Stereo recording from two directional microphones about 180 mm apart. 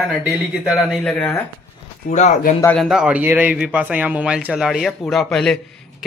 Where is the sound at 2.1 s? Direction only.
40° left (ahead or behind).